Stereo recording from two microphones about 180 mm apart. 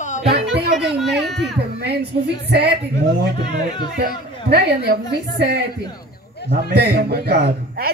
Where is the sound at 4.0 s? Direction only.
60° right (ahead or behind).